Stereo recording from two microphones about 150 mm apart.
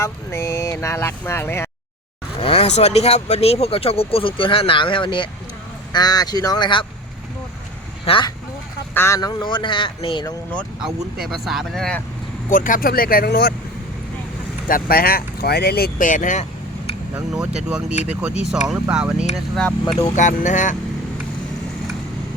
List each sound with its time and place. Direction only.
0.0 s speech: 20° left (ahead or behind)
2.4 s speech: 40° left (ahead or behind)
8.0 s speech: 35° left (ahead or behind)
9.0 s speech: 20° left (ahead or behind); by 10.2 s 35° left (ahead or behind)
11.2 s speech: centre (ahead or behind)
12.5 s speech: 60° left (ahead or behind); by 13.5 s 90° left
14.7 s speech: 80° left; by 16.9 s 50° left (ahead or behind)
17.7 s speech: 5° right (ahead or behind)
20.0 s speech: 55° left (ahead or behind)